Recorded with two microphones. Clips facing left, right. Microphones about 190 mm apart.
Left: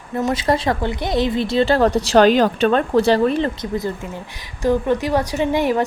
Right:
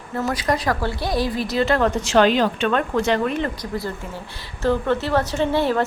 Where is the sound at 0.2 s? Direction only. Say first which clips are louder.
Left 3 dB; 25° left (ahead or behind).